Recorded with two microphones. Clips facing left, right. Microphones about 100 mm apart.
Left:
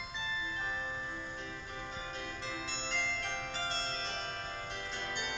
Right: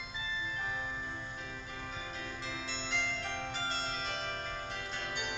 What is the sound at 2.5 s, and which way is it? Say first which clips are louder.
Music: even; 40° left (ahead or behind).